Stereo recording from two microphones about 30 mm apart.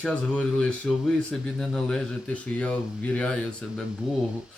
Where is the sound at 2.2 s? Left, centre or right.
Left.